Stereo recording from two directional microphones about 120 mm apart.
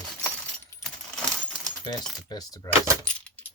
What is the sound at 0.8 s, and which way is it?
Keys jangling, 5° left (ahead or behind).